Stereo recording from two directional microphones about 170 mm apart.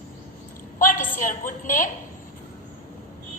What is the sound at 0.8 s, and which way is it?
A woman's voice, 55° left (ahead or behind).